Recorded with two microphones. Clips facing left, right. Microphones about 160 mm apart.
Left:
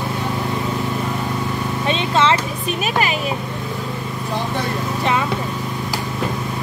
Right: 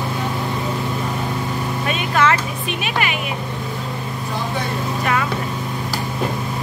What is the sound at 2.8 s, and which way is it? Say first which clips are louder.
Music: left 3 dB; 35° left (ahead or behind).